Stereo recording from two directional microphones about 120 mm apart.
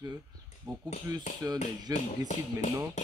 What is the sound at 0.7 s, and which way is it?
Speech, 30° right (ahead or behind).